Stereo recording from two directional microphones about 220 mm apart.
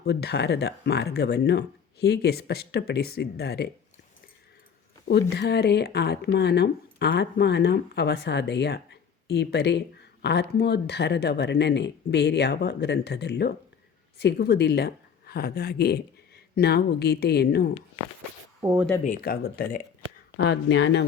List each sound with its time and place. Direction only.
0.0 s speech: 45° left (ahead or behind)
5.3 s speech: 50° left (ahead or behind)
18.6 s speech: 10° right (ahead or behind)
19.0 s speech: 40° left (ahead or behind)
20.3 s speech: 50° left (ahead or behind)